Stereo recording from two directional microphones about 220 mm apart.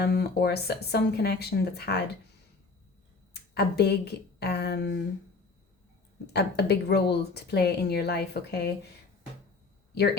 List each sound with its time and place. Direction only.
0.0 s a woman's voice: 50° left (ahead or behind)
3.5 s a woman's voice: 50° left (ahead or behind)
6.2 s a woman's voice: 50° left (ahead or behind)